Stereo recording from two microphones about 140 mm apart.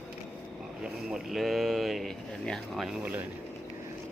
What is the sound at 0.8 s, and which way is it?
Speech, 5° right (ahead or behind).